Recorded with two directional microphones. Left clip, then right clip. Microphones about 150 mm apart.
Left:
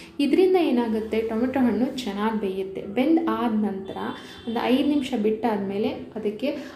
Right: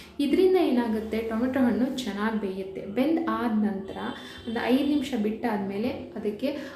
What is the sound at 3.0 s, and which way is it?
Speech, 10° left (ahead or behind).